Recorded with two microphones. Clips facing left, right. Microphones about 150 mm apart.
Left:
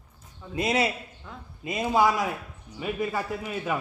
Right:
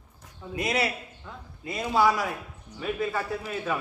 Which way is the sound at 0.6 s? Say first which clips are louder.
Left 2 dB; 20° left (ahead or behind).